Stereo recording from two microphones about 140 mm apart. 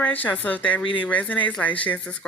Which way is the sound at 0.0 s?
10° left (ahead or behind).